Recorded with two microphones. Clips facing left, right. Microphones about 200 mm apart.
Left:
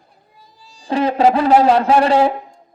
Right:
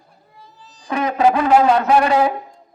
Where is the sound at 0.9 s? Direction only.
30° left (ahead or behind).